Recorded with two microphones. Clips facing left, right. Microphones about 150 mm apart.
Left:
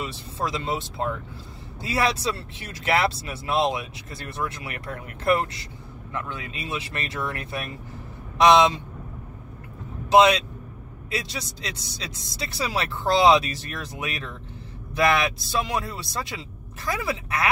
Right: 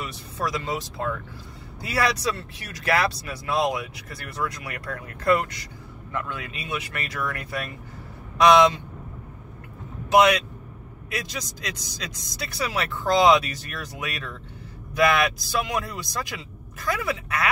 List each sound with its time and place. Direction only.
0.0 s speech: 25° left (ahead or behind)
10.1 s speech: 25° left (ahead or behind)